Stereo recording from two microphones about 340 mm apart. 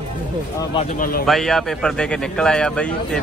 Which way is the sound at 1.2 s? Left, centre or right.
Centre.